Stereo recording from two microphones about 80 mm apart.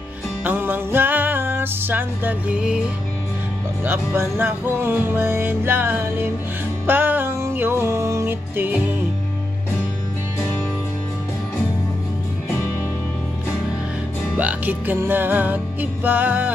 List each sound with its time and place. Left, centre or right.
0.4 s music: right
2.5 s music: centre
3.8 s music: right
14.3 s music: right